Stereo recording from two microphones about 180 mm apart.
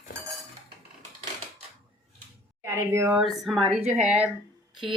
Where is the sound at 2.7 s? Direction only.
15° right (ahead or behind).